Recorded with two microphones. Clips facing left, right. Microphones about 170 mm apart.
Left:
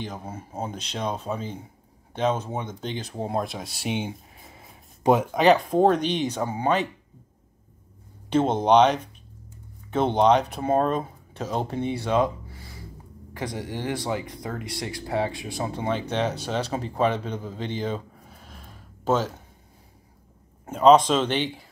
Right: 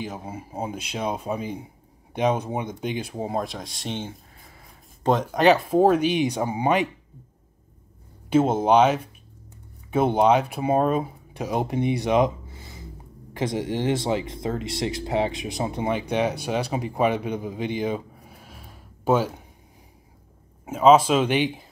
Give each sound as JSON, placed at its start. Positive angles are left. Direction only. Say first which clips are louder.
{"t": 0.0, "sound": "speech", "louder": "right 2 dB", "side_deg": -10}
{"t": 3.3, "sound": "speech", "louder": "even", "side_deg": 0}
{"t": 4.4, "sound": "a sound", "louder": "left 2 dB", "side_deg": 20}
{"t": 5.1, "sound": "speech", "louder": "even", "side_deg": 5}
{"t": 8.3, "sound": "speech", "louder": "right 1 dB", "side_deg": -5}
{"t": 20.6, "sound": "speech", "louder": "even", "side_deg": -5}